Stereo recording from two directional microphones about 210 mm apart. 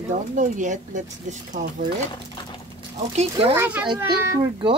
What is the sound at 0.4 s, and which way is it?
Speech, 35° right (ahead or behind).